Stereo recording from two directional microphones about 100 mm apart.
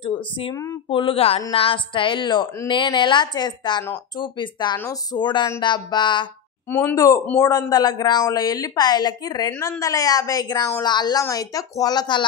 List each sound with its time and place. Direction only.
0.0 s speech: 60° left (ahead or behind); by 1.4 s 75° left (ahead or behind)
1.5 s a woman's voice: 60° left (ahead or behind)
6.7 s speech: 20° left (ahead or behind)
7.3 s a woman's voice: 35° left (ahead or behind)
11.2 s a woman's voice: 35° left (ahead or behind)